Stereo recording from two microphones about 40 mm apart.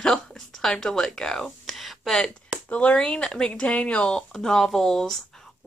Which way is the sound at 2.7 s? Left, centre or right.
Left.